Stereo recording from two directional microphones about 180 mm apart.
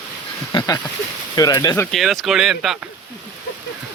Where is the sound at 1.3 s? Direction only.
20° left (ahead or behind).